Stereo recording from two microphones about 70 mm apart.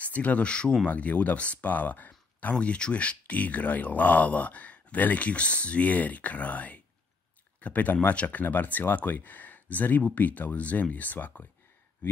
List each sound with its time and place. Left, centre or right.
0.0 s speech: left
2.5 s speech: centre